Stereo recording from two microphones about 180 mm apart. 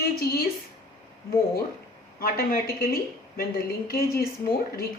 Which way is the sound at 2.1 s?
55° left (ahead or behind).